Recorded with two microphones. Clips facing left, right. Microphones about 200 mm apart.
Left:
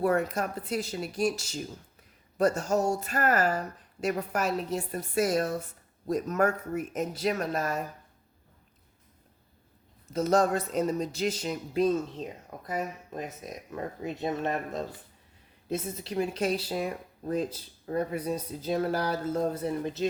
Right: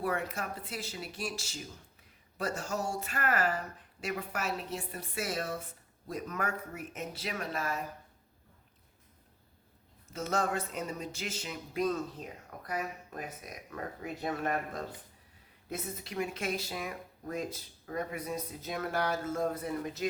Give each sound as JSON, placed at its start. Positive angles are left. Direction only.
{"t": 0.0, "sound": "speech", "side_deg": 45}
{"t": 10.1, "sound": "speech", "side_deg": 40}